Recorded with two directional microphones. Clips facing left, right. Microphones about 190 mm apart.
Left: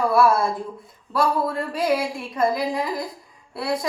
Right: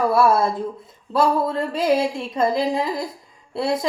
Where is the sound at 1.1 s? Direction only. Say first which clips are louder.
Right 3 dB; 25° right (ahead or behind).